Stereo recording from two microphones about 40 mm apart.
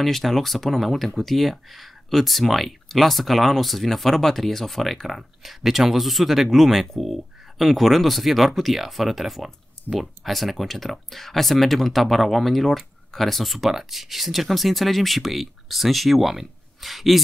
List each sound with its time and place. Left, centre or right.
0.0 s speech: centre